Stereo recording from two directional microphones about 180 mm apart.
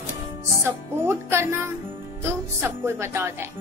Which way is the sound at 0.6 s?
15° right (ahead or behind).